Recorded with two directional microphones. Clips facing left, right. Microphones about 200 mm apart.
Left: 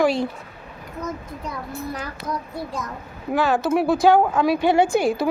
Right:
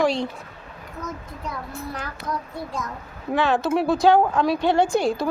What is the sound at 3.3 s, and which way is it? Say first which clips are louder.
Speech: left 1 dB; centre (ahead or behind).